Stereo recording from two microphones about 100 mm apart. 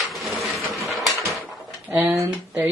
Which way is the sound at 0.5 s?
Centre (ahead or behind).